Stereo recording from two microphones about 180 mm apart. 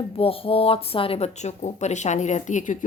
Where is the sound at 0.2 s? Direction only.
30° left (ahead or behind).